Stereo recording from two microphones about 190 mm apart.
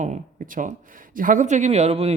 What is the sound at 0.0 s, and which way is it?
Speech, 40° right (ahead or behind).